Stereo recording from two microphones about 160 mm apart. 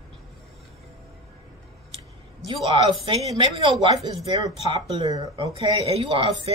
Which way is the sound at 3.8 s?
30° right (ahead or behind).